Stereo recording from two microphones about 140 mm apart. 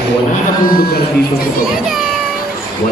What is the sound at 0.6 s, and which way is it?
Speech, 90° left.